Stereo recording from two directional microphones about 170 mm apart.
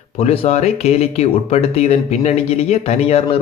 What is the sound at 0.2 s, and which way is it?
Speech, 40° left (ahead or behind).